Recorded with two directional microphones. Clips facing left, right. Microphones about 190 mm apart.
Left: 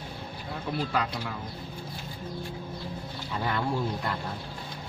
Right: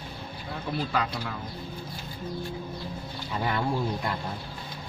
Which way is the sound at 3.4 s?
15° right (ahead or behind).